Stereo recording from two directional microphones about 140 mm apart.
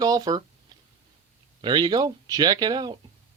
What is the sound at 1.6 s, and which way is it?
Speech, 30° right (ahead or behind).